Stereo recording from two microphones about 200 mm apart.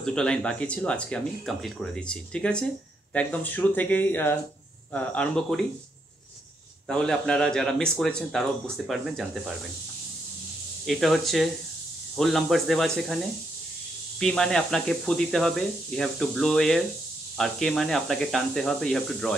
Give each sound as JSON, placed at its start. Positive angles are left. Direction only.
{"t": 0.0, "sound": "speech", "side_deg": 5}
{"t": 6.9, "sound": "speech", "side_deg": 5}
{"t": 10.9, "sound": "speech", "side_deg": 0}
{"t": 14.2, "sound": "speech", "side_deg": 0}